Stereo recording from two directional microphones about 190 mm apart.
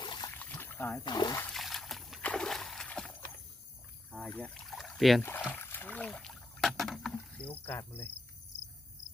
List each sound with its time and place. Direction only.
0.0 s a sound: 25° left (ahead or behind)
0.3 s a sound: 10° left (ahead or behind)
1.0 s speech: 20° left (ahead or behind)
1.4 s splash: 5° left (ahead or behind)
4.1 s rowboat: 5° left (ahead or behind)
5.5 s rowboat: 10° left (ahead or behind)